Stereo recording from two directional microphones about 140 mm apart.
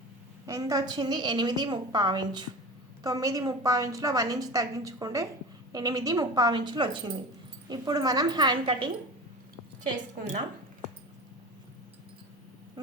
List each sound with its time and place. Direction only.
0.4 s a woman's voice: 25° right (ahead or behind)
10.2 s a woman's voice: 55° right (ahead or behind)